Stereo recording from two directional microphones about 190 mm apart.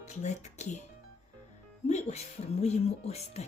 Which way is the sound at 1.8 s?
35° left (ahead or behind).